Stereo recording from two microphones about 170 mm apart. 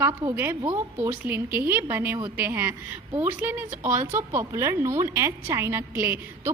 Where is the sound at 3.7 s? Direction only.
50° right (ahead or behind).